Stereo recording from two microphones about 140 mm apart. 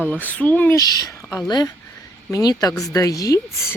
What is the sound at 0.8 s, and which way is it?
A woman's voice, 25° left (ahead or behind).